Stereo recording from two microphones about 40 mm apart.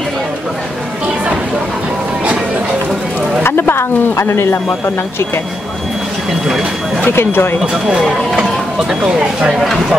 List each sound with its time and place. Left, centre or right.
3.4 s a woman's voice: left
7.2 s a woman's voice: left
7.7 s speech: centre
8.4 s a sound: centre